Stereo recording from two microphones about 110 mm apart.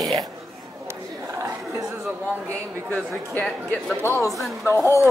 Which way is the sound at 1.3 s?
25° right (ahead or behind).